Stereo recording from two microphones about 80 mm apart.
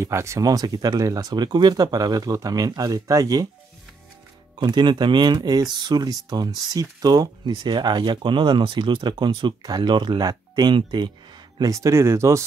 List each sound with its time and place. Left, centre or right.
0.0 s speech: right
4.6 s speech: right
11.7 s speech: right